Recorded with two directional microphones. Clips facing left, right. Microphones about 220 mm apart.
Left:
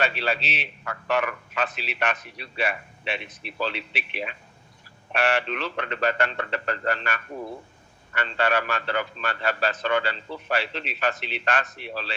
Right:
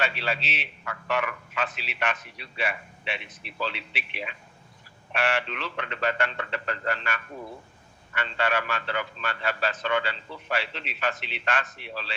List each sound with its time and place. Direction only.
0.0 s a man's voice: 40° left (ahead or behind)